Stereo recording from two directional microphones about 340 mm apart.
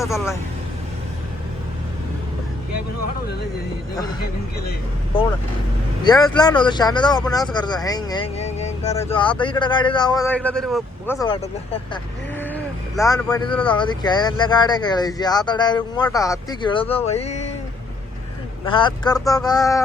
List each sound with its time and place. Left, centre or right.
0.0 s speech: centre
6.1 s speech: centre
18.6 s speech: centre